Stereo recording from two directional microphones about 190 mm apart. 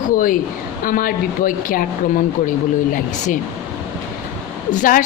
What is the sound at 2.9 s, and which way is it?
Speech, 45° left (ahead or behind).